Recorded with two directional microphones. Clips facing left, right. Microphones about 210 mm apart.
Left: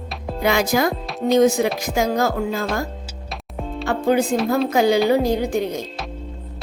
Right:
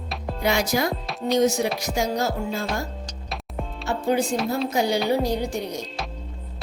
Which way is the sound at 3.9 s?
90° left.